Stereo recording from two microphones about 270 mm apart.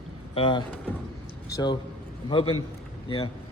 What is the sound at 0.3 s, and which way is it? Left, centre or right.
A man's voice, centre.